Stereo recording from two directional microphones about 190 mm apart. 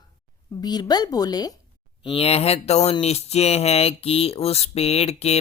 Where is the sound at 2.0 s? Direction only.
30° left (ahead or behind).